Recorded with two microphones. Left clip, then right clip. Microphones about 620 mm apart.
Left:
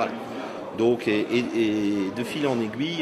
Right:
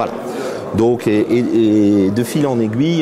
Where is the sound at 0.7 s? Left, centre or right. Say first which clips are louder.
Right 8 dB; right.